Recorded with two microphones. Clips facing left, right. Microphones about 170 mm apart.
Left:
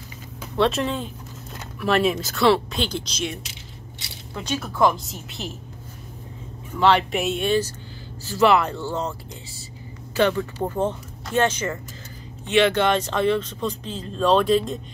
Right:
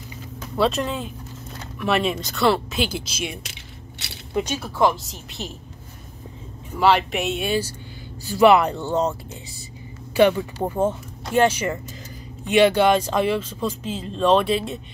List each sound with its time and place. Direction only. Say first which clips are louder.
0.6 s speech: even; centre (ahead or behind); by 4.6 s 20° right (ahead or behind)
4.6 s speech: left 2 dB; 5° right (ahead or behind)
6.8 s speech: even; 5° right (ahead or behind); by 9.1 s 20° right (ahead or behind)
10.1 s speech: right 4 dB; 15° right (ahead or behind)